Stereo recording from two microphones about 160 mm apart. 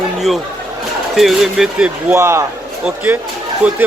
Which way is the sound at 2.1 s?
15° right (ahead or behind).